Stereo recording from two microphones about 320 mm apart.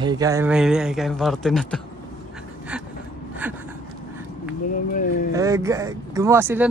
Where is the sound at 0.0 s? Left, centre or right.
Centre.